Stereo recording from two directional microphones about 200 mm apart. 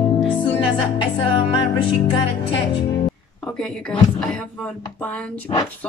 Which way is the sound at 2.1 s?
25° left (ahead or behind).